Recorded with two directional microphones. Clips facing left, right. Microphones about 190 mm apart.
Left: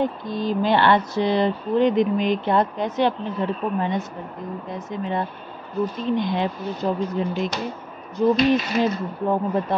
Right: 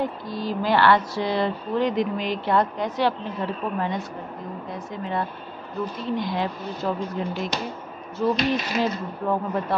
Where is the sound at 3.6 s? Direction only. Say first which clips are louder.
Left 3 dB; 15° left (ahead or behind).